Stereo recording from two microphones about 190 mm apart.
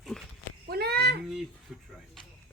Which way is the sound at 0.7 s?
55° right (ahead or behind).